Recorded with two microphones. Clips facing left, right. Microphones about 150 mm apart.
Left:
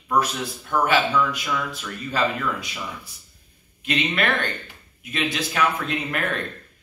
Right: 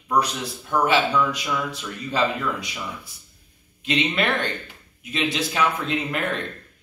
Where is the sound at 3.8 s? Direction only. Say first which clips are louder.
Right 1 dB; 25° right (ahead or behind).